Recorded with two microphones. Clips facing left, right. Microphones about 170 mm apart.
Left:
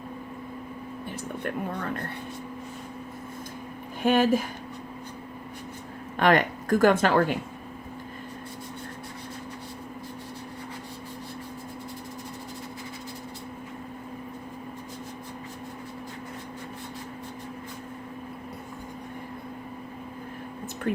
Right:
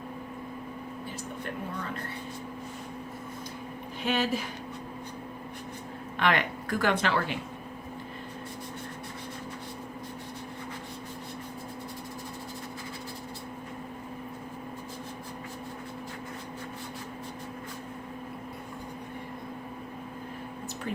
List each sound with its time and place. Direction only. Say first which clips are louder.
4.0 s speech: left 7 dB; 50° left (ahead or behind)
6.1 s speech: left 6 dB; 45° left (ahead or behind)
20.9 s a sound: left 7 dB; 60° left (ahead or behind)